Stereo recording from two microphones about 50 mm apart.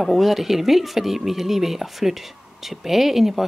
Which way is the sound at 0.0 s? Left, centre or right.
Centre.